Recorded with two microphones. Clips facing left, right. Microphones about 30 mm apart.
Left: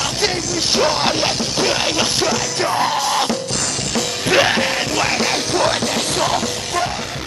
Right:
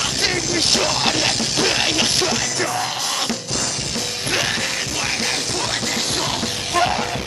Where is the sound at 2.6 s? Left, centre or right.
Left.